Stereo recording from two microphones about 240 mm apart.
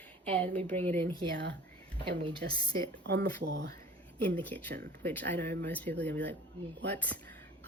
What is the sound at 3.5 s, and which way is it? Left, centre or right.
Speech, right.